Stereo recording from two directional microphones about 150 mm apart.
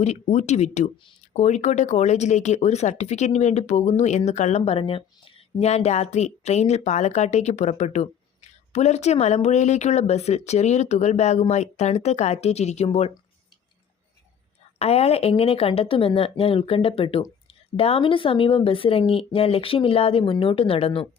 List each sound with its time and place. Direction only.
0.0 s speech: 50° left (ahead or behind)
14.8 s speech: 45° left (ahead or behind)